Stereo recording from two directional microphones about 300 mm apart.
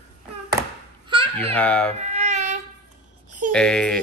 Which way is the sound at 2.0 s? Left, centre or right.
Right.